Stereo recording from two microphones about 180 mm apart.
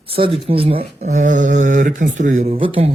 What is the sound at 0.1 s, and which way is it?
Speech, 30° right (ahead or behind).